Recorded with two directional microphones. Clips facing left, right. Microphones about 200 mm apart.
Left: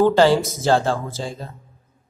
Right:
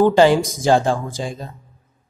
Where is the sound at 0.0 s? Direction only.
15° right (ahead or behind).